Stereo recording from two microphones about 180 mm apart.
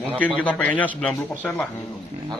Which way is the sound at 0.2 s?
5° left (ahead or behind).